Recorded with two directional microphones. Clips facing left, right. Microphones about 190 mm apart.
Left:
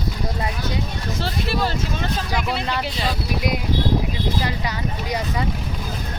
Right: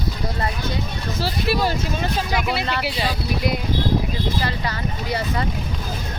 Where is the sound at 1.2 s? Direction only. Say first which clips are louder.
Right 3 dB; 10° right (ahead or behind).